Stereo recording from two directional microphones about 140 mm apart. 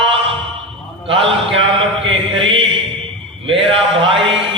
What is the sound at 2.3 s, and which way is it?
Mantra, 40° right (ahead or behind).